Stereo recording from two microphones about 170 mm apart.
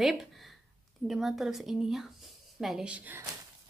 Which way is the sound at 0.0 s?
Centre (ahead or behind).